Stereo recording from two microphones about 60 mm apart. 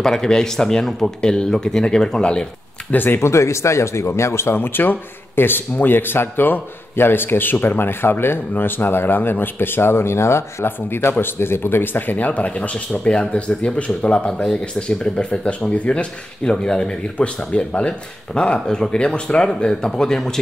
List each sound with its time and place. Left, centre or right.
0.0 s speech: centre
2.9 s speech: left
3.2 s speech: left
4.6 s speech: left; by 20.3 s centre